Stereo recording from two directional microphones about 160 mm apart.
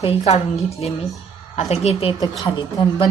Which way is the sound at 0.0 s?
40° left (ahead or behind).